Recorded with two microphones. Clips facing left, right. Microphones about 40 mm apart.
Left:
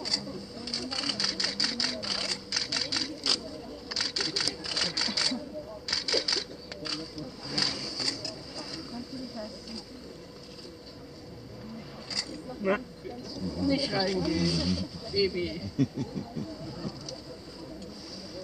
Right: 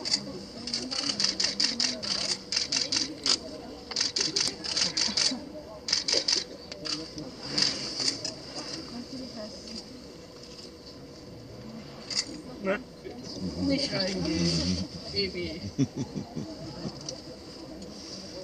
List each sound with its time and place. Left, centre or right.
0.0 s sewing machine: centre
3.9 s camera: centre
4.6 s sewing machine: centre
12.1 s a sound: centre
12.6 s speech: centre
13.3 s a sound: centre